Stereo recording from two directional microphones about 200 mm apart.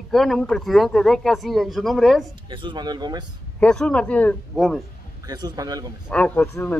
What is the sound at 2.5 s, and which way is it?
Speech, 25° right (ahead or behind).